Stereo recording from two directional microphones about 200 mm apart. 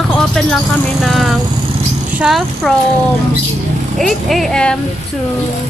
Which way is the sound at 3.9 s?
Centre (ahead or behind).